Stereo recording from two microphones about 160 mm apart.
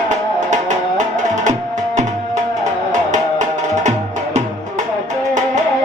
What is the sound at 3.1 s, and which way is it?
Music, 50° right (ahead or behind).